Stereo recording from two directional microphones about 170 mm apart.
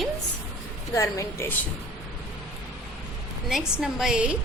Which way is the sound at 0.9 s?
20° left (ahead or behind).